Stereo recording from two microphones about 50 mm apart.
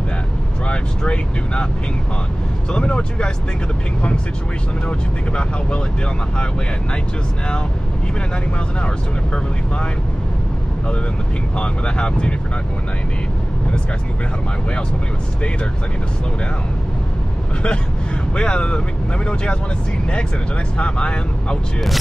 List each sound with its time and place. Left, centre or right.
0.7 s speech: left
2.7 s speech: left
4.8 s speech: left
8.8 s speech: left
11.5 s speech: left
18.3 s speech: centre
20.7 s speech: left